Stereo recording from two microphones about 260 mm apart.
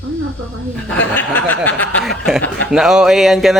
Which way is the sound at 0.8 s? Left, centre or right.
Centre.